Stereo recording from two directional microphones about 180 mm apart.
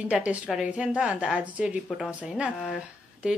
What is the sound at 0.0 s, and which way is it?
A woman's voice, 5° right (ahead or behind).